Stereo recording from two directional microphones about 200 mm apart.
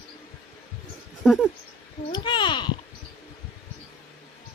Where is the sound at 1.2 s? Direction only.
Centre (ahead or behind).